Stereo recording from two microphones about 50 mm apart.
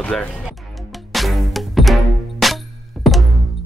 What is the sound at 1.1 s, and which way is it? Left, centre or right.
Music, centre.